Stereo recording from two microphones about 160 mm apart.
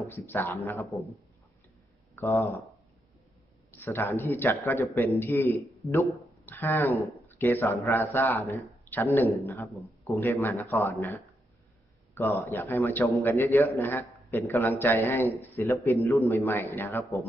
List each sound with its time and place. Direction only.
0.0 s a man's voice: 15° left (ahead or behind)
2.1 s speech: 15° left (ahead or behind)
3.7 s a man's voice: 10° left (ahead or behind)
5.8 s speech: centre (ahead or behind)
6.4 s a man's voice: 15° left (ahead or behind)